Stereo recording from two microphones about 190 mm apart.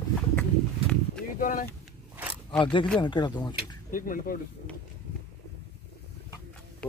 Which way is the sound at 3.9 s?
45° left (ahead or behind).